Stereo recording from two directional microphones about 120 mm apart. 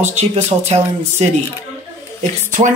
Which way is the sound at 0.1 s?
70° right (ahead or behind).